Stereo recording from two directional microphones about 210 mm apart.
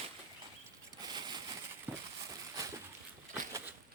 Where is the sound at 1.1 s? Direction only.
20° right (ahead or behind).